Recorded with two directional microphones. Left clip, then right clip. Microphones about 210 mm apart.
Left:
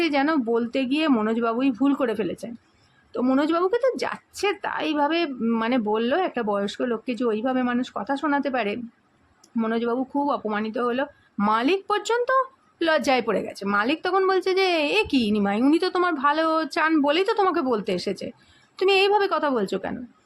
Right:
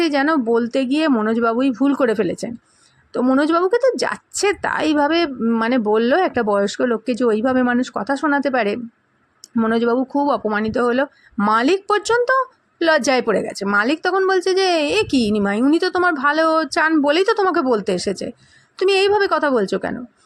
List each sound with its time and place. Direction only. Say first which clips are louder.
0.0 s speech: right 5 dB; 15° right (ahead or behind)